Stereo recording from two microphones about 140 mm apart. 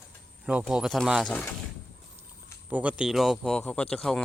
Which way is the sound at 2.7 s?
10° right (ahead or behind).